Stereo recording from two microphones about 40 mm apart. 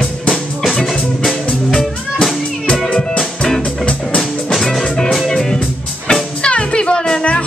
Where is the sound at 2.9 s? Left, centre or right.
Centre.